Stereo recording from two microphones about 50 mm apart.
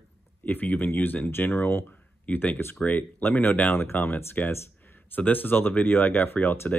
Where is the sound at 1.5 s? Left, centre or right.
Left.